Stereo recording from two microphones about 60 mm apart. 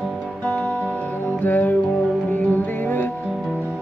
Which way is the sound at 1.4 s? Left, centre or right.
Left.